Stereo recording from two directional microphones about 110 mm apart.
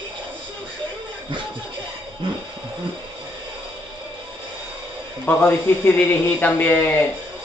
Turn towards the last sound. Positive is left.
turn(degrees=20)  # may be behind; listen again after turning